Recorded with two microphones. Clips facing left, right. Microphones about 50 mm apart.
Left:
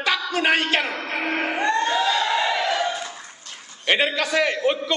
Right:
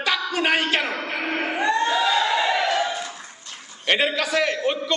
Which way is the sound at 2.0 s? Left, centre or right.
Centre.